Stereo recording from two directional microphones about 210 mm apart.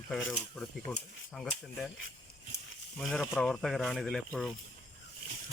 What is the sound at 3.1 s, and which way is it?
Speech, 5° left (ahead or behind).